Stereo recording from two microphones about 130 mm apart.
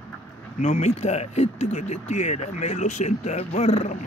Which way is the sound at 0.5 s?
65° left (ahead or behind).